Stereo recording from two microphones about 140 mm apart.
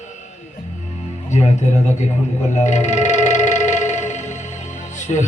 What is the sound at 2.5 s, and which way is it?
Music, 55° left (ahead or behind).